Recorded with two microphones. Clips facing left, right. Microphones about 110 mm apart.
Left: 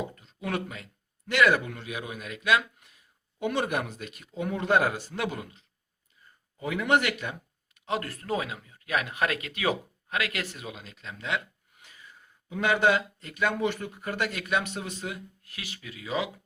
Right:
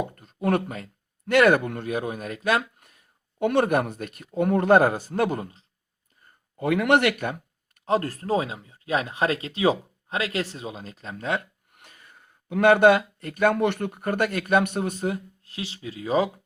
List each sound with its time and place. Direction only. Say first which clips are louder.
0.0 s speech: right 8 dB; 50° right (ahead or behind)
6.6 s speech: right 5 dB; 65° right (ahead or behind); by 11.4 s 40° right (ahead or behind)
11.7 s speech: right 1 dB; 55° right (ahead or behind)
15.4 s speech: right 8 dB; 30° right (ahead or behind)